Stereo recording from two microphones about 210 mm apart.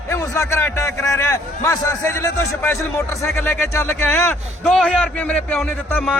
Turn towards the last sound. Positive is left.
turn(degrees=5)  # may be behind; listen again after turning